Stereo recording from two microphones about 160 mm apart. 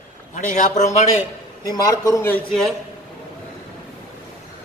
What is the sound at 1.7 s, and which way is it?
A man's voice, 20° left (ahead or behind).